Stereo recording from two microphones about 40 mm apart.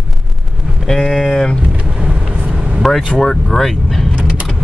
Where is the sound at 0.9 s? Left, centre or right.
Centre.